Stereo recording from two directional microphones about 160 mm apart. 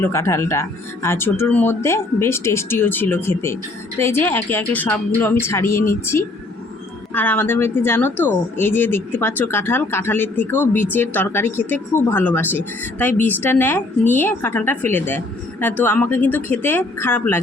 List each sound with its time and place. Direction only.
0.0 s speech: 15° left (ahead or behind)